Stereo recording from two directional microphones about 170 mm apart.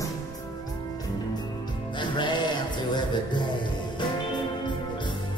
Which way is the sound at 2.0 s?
25° left (ahead or behind).